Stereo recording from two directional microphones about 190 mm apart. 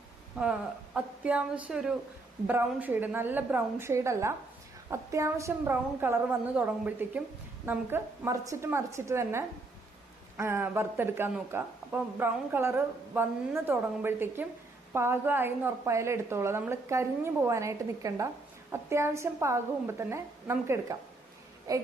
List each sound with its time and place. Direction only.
0.3 s a woman's voice: 5° right (ahead or behind)